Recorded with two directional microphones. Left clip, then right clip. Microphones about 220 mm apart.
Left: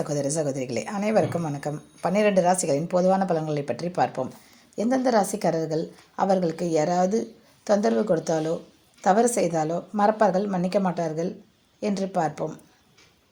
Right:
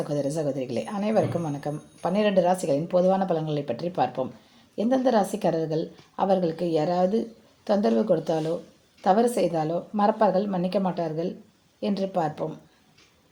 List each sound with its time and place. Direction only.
0.0 s a woman's voice: 35° left (ahead or behind)